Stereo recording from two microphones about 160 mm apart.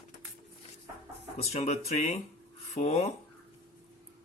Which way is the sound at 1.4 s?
45° left (ahead or behind).